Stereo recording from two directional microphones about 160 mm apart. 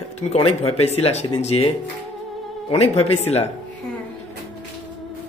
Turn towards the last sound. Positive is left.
turn(degrees=40)  # may be behind; listen again after turning